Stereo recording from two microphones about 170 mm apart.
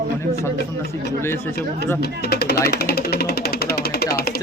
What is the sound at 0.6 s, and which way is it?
Speech, 70° left (ahead or behind).